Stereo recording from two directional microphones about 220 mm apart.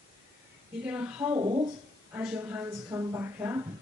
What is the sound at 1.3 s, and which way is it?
Speech, 20° right (ahead or behind).